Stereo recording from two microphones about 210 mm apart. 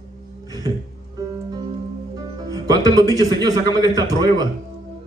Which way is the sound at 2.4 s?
15° right (ahead or behind).